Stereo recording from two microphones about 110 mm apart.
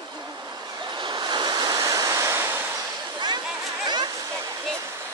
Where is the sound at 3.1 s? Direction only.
40° right (ahead or behind).